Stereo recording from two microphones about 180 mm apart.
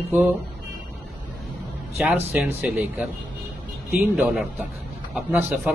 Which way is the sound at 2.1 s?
10° right (ahead or behind).